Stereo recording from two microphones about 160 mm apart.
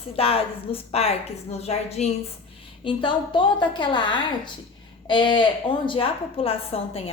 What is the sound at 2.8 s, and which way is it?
A woman's voice, 30° left (ahead or behind).